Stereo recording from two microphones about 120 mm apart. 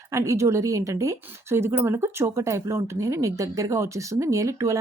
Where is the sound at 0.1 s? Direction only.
25° right (ahead or behind).